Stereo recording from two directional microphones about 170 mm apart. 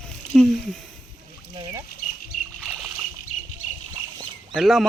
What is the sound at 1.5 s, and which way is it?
Speech, 20° right (ahead or behind).